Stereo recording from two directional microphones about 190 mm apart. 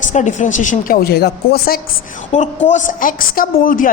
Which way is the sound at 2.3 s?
40° left (ahead or behind).